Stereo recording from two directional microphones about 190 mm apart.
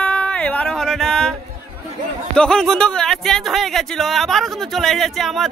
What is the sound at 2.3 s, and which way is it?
Speech, 5° left (ahead or behind).